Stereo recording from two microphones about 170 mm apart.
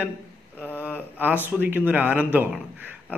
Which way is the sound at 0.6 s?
10° left (ahead or behind).